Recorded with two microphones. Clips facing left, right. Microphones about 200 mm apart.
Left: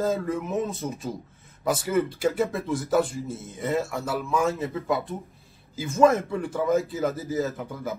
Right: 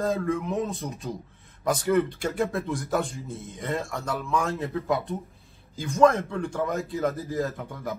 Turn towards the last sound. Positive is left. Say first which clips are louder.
# left 1 dB
turn(degrees=0)  # may be behind; listen again after turning